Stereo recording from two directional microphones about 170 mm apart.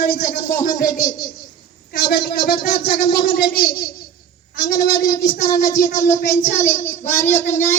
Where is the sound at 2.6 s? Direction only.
65° left (ahead or behind).